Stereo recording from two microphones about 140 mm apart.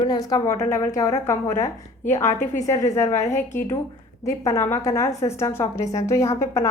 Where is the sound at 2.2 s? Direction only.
55° left (ahead or behind).